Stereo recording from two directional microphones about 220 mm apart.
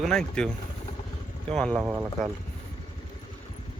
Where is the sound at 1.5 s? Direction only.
5° left (ahead or behind).